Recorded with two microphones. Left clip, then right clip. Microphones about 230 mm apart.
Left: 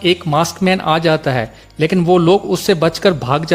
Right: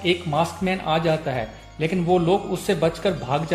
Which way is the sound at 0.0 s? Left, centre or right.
Left.